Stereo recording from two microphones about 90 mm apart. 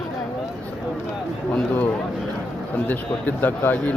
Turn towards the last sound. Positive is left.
turn(degrees=20)  # may be behind; listen again after turning